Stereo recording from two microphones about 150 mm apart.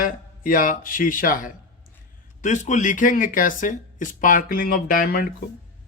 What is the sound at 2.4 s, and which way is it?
Speech, 55° left (ahead or behind).